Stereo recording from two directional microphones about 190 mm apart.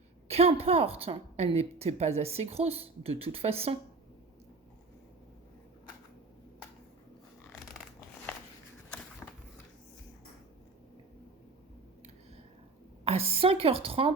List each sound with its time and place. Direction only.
0.3 s a woman's voice: 30° right (ahead or behind)
9.2 s a sound: 10° left (ahead or behind)
13.1 s a woman's voice: 30° right (ahead or behind)